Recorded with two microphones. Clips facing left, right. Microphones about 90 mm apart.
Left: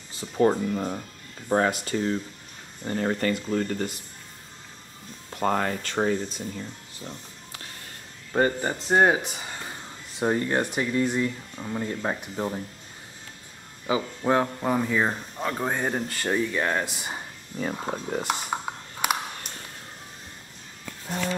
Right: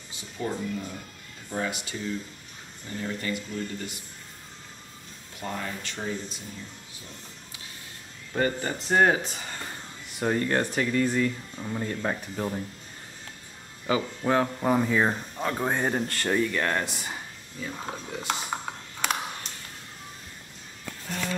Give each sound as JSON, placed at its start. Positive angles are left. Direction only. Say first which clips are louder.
{"t": 0.2, "sound": "speech", "louder": "left 10 dB", "side_deg": 55}
{"t": 5.3, "sound": "speech", "louder": "left 9 dB", "side_deg": 55}
{"t": 8.3, "sound": "speech", "louder": "left 3 dB", "side_deg": 30}
{"t": 10.1, "sound": "speech", "louder": "left 1 dB", "side_deg": 20}
{"t": 13.8, "sound": "speech", "louder": "left 1 dB", "side_deg": 15}
{"t": 14.6, "sound": "speech", "louder": "right 1 dB", "side_deg": -5}
{"t": 17.9, "sound": "speech", "louder": "left 7 dB", "side_deg": 45}
{"t": 18.2, "sound": "computer keyboard", "louder": "left 2 dB", "side_deg": 10}
{"t": 21.1, "sound": "a sound", "louder": "left 3 dB", "side_deg": 15}